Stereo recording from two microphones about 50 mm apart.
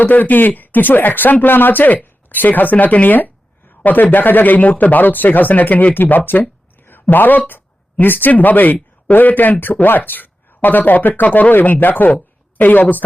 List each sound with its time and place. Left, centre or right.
0.0 s a woman's voice: left